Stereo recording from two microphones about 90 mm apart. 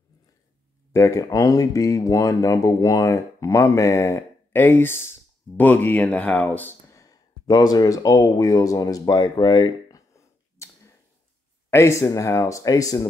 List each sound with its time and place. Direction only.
0.9 s speech: 40° left (ahead or behind); by 6.7 s 15° left (ahead or behind)
6.9 s a sound: 40° left (ahead or behind)
11.7 s speech: 35° left (ahead or behind)